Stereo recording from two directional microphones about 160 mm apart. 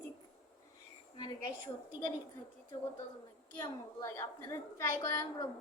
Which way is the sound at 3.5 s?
30° left (ahead or behind).